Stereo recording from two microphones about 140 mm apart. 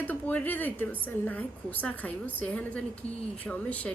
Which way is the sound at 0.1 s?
10° left (ahead or behind).